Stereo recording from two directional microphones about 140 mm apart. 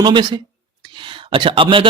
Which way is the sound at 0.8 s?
35° right (ahead or behind).